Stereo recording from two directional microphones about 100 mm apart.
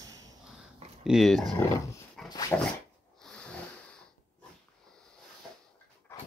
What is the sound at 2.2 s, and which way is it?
Dog, 40° left (ahead or behind).